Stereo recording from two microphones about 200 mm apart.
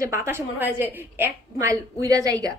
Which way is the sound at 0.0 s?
15° right (ahead or behind).